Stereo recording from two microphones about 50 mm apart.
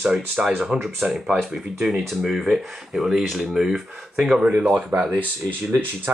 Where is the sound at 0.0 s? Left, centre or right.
Centre.